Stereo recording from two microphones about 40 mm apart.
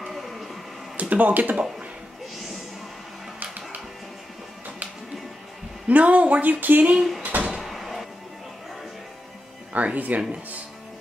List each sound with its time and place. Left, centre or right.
0.1 s a sound: centre
0.9 s speech: right
5.9 s speech: right
6.9 s speech: centre
7.2 s a sound: right
7.5 s door: centre
9.9 s speech: right